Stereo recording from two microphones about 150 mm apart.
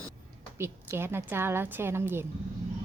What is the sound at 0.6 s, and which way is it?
A woman's voice, 15° right (ahead or behind).